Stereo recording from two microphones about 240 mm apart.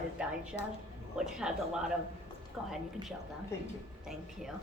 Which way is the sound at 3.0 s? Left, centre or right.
Centre.